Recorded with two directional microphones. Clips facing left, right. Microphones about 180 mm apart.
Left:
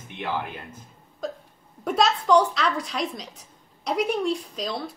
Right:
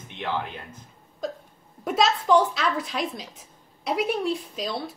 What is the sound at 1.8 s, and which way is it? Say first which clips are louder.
A woman's voice: even; centre (ahead or behind).